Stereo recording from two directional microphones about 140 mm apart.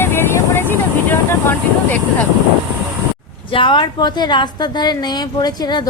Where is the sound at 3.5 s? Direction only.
35° left (ahead or behind).